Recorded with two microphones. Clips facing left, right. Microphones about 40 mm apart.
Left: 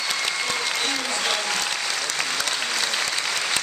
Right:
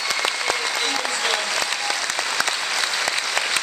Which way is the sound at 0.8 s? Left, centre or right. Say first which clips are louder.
Right 2 dB; centre.